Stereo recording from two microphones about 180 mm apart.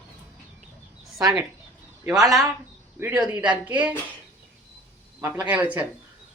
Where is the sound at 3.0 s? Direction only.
10° right (ahead or behind).